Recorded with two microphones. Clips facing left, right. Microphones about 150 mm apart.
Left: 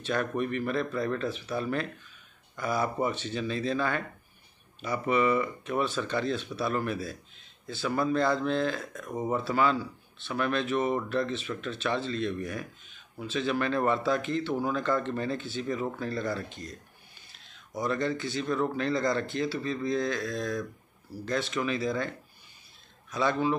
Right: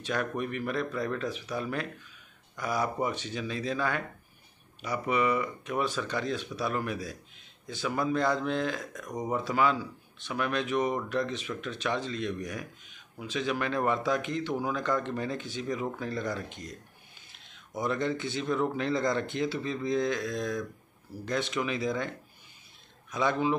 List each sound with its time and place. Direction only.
0.0 s speech: 10° right (ahead or behind)
23.1 s speech: 15° right (ahead or behind)